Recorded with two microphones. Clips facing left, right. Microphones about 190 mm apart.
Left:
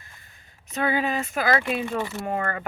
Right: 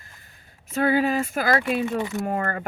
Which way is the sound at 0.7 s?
45° right (ahead or behind).